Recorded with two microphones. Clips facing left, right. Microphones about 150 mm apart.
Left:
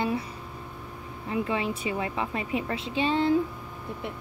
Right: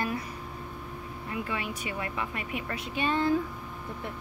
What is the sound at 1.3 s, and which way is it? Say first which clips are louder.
Speech: left 6 dB; 25° left (ahead or behind).